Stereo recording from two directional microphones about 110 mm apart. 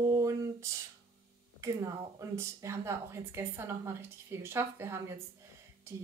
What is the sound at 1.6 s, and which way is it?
Speech, 30° right (ahead or behind).